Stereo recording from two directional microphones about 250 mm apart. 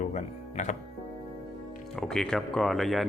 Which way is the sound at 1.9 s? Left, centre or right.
Centre.